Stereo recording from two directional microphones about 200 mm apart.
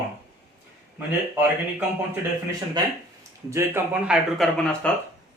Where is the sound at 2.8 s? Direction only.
20° right (ahead or behind).